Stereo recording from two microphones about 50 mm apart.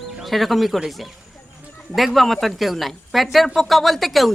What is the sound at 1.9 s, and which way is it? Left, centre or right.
Speech, centre.